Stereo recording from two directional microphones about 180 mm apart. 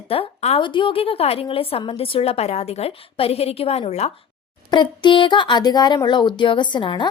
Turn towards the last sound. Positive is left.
turn(degrees=25)  # may be behind; listen again after turning